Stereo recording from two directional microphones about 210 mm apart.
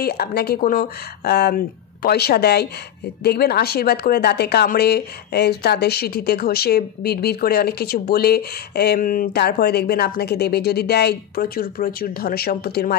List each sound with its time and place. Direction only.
0.0 s speech: 50° left (ahead or behind)